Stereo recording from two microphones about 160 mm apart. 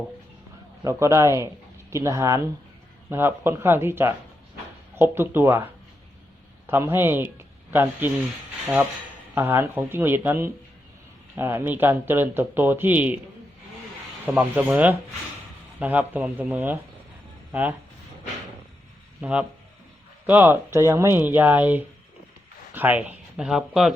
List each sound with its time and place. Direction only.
0.9 s speech: 20° right (ahead or behind)
6.7 s speech: 15° right (ahead or behind)
9.3 s speech: 15° right (ahead or behind)
14.3 s speech: 10° right (ahead or behind)
19.2 s speech: 10° right (ahead or behind)